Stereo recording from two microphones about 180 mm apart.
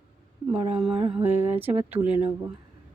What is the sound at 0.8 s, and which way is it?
Mantra, 30° right (ahead or behind).